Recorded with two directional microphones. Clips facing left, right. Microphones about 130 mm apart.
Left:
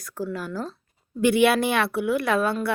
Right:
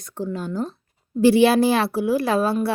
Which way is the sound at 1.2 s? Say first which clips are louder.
Right 4 dB; 30° right (ahead or behind).